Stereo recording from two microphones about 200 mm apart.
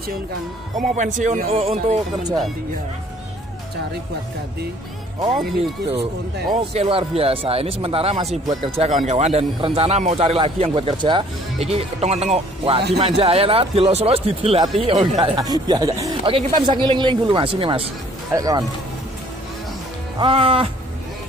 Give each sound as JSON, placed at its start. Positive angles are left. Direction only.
{"t": 0.7, "sound": "speech", "side_deg": -40}
{"t": 6.7, "sound": "speech", "side_deg": -30}
{"t": 18.3, "sound": "speech", "side_deg": -15}
{"t": 20.2, "sound": "speech", "side_deg": -25}